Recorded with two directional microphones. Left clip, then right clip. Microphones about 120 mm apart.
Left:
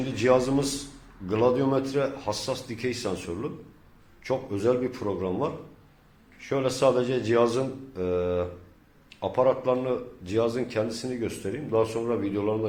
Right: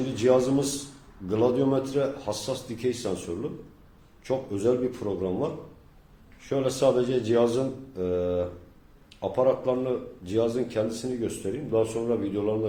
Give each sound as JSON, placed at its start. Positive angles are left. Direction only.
{"t": 0.2, "sound": "a man's voice", "side_deg": -25}